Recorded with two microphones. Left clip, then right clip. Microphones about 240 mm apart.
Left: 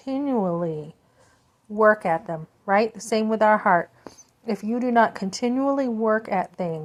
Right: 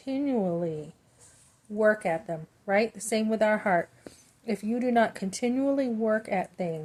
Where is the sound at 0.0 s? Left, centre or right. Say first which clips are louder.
Left 4 dB; centre.